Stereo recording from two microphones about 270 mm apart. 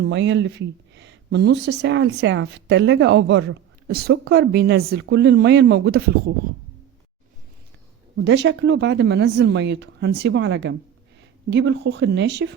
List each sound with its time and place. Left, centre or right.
0.0 s speech: right
8.1 s speech: right